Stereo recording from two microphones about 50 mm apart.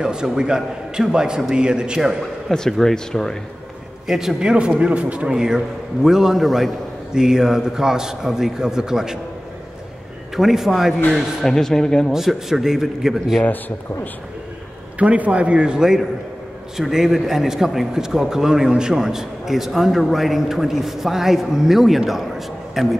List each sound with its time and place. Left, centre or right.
0.0 s a man's voice: centre
2.5 s speech: centre
4.1 s a man's voice: centre
4.4 s a man's voice: centre
5.3 s a man's voice: centre
7.2 s a man's voice: centre
10.3 s a man's voice: centre
11.1 s speech: centre
12.1 s a man's voice: centre
13.4 s speech: left
15.0 s a man's voice: right; by 22.9 s centre